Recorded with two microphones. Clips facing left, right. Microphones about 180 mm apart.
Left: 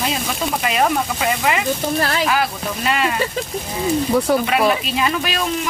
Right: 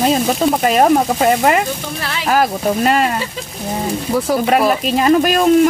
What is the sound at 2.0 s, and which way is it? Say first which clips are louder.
Speech: left 5 dB; 45° left (ahead or behind).